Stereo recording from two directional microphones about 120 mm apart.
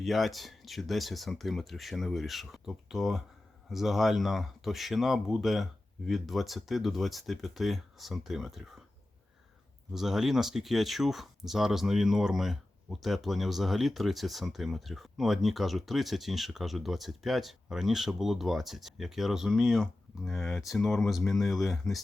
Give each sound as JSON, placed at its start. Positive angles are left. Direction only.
{"t": 0.0, "sound": "speech", "side_deg": 0}
{"t": 9.9, "sound": "speech", "side_deg": -5}